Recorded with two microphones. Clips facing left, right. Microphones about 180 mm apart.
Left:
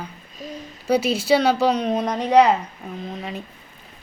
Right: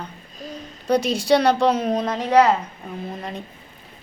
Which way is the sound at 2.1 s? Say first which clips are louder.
Left 1 dB; 15° left (ahead or behind).